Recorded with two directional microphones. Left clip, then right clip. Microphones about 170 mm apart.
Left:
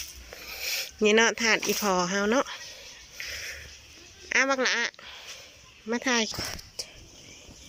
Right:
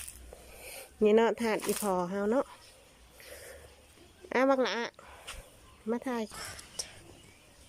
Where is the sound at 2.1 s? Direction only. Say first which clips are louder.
Left 5 dB; 15° right (ahead or behind).